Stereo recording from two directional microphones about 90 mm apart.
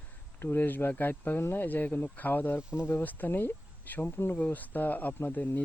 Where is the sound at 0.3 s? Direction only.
20° left (ahead or behind).